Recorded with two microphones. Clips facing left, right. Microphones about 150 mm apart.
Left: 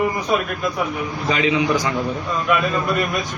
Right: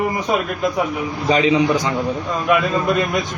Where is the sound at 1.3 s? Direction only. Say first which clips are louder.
Right 4 dB; 35° right (ahead or behind).